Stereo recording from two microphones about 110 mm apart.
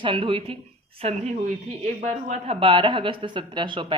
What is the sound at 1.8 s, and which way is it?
Speech, 90° right.